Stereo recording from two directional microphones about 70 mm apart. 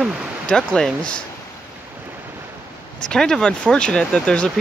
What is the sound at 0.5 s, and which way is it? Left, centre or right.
Speech, centre.